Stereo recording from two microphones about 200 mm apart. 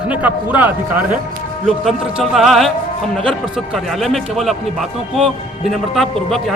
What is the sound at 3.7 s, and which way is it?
A man's voice, centre (ahead or behind).